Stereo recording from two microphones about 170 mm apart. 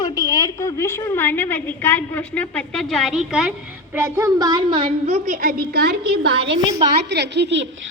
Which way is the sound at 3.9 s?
15° right (ahead or behind).